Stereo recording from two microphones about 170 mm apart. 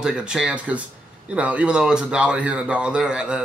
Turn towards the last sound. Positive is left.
turn(degrees=-5)  # may be behind; listen again after turning